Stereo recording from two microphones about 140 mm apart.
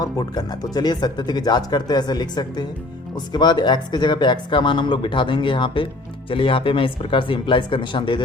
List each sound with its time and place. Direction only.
0.0 s speech: 30° left (ahead or behind)